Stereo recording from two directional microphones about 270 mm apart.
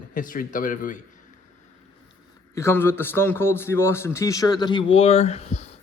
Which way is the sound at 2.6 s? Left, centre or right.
Centre.